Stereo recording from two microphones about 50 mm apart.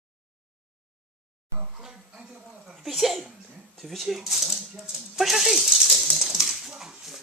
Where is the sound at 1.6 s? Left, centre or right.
Centre.